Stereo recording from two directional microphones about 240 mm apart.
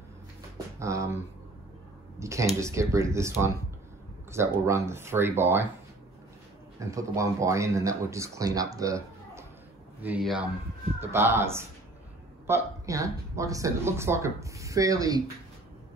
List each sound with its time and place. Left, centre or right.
0.7 s speech: centre
2.1 s speech: centre
6.8 s speech: centre